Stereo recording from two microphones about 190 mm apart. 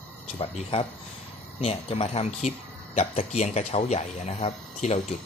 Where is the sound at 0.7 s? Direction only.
25° left (ahead or behind).